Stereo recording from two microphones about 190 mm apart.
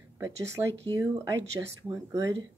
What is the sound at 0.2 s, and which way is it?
Speech, 15° right (ahead or behind).